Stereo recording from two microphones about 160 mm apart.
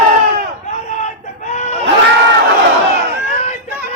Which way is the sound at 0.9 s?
45° left (ahead or behind).